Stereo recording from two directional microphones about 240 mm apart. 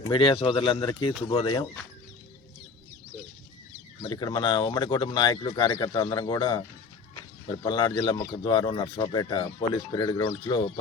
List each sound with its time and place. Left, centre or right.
0.1 s speech: left
4.0 s speech: centre